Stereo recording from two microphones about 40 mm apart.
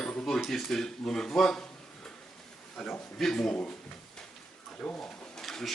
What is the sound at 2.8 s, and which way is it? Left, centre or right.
Speech, centre.